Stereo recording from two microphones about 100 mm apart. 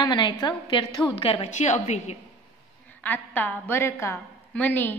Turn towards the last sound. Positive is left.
turn(degrees=20)  # may be behind; listen again after turning